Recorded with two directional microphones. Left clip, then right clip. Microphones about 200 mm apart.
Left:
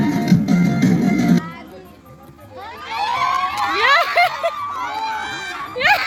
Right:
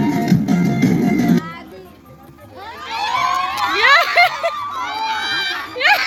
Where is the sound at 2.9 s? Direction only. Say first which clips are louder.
Right 1 dB; 15° left (ahead or behind).